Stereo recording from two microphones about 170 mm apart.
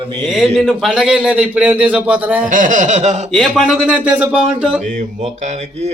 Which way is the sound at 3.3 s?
Centre (ahead or behind).